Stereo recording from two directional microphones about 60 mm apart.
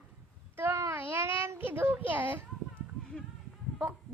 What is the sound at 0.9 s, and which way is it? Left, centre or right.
A child's voice, right.